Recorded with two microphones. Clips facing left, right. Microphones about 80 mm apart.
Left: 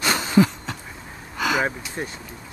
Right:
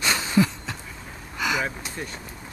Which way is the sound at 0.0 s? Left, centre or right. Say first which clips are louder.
Left 2 dB; left.